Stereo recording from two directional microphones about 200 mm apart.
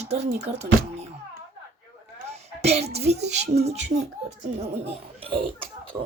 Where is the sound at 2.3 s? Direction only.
30° right (ahead or behind).